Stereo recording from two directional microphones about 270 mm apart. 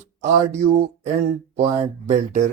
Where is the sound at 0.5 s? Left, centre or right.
Right.